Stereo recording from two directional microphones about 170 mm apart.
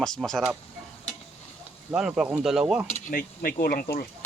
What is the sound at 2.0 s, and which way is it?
Speech, 5° right (ahead or behind).